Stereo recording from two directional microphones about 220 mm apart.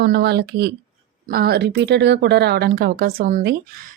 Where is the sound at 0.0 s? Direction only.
50° right (ahead or behind).